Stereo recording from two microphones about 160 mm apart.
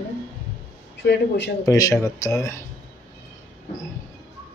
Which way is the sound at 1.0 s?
90° left.